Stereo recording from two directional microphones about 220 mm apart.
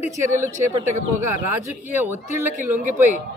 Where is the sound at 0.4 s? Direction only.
35° right (ahead or behind).